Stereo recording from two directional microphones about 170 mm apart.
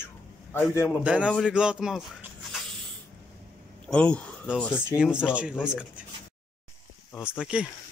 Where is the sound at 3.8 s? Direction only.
5° left (ahead or behind).